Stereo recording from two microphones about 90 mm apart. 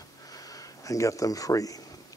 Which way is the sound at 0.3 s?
45° left (ahead or behind).